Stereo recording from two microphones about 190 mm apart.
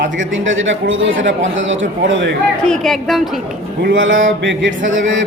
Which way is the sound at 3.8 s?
90° right.